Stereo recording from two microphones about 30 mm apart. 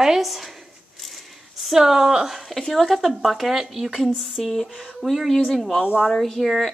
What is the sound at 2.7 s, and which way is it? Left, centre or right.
Speech, centre.